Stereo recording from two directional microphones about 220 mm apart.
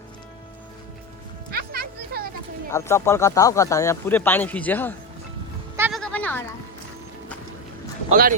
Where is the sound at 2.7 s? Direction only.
10° left (ahead or behind).